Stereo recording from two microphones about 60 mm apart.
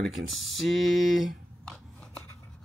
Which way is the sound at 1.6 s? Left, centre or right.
Centre.